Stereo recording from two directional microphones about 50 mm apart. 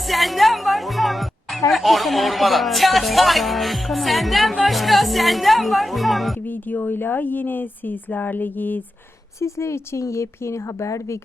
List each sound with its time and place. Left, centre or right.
0.0 s music: centre
4.6 s speech: centre
6.4 s speech: left
9.4 s a woman's voice: left